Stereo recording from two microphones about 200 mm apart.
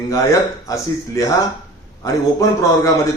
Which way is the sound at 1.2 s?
15° left (ahead or behind).